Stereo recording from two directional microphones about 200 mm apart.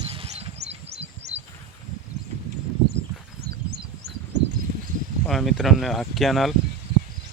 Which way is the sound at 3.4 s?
55° right (ahead or behind).